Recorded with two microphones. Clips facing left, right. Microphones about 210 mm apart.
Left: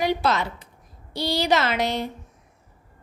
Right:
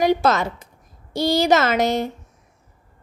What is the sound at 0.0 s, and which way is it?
A woman's voice, 45° right (ahead or behind).